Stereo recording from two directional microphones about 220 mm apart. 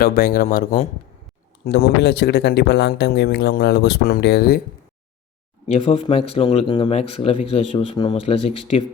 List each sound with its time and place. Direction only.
0.0 s speech: 40° left (ahead or behind)
1.6 s speech: 50° left (ahead or behind)
5.7 s speech: 25° left (ahead or behind)